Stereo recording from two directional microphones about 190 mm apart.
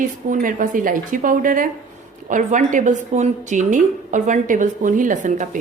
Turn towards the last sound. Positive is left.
turn(degrees=-40)  # may be behind; listen again after turning